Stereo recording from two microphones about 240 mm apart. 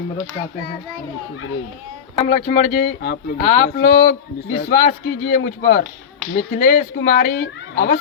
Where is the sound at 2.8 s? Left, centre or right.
Left.